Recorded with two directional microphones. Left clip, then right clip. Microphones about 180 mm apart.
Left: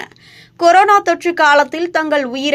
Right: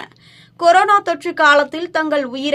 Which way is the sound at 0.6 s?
15° left (ahead or behind).